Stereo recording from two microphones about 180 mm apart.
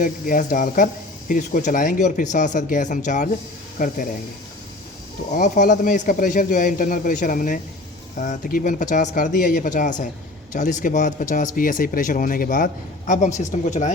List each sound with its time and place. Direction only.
0.0 s a man's voice: 50° left (ahead or behind)
5.3 s a man's voice: 45° left (ahead or behind)